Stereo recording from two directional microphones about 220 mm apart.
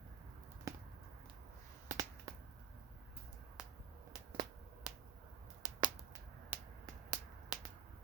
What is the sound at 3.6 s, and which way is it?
Finger snapping, 5° right (ahead or behind).